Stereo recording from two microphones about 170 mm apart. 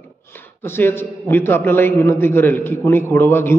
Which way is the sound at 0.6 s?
15° left (ahead or behind).